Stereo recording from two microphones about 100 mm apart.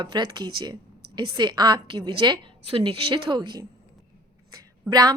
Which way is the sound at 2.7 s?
60° right (ahead or behind).